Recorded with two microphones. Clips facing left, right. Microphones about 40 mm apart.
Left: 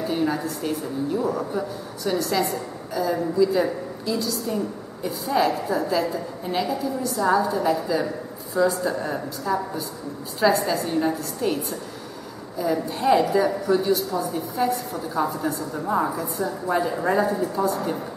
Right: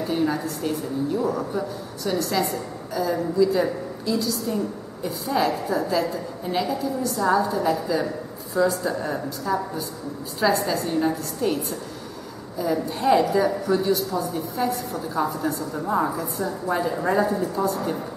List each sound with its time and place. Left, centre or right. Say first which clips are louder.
0.0 s a woman's voice: even; centre